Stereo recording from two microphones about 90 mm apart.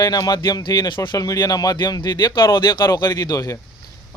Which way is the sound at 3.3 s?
35° left (ahead or behind).